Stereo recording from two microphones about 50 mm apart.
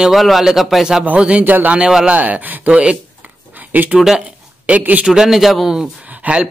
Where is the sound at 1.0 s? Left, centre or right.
Right.